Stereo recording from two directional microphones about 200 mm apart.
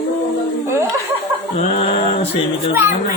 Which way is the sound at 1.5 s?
30° left (ahead or behind).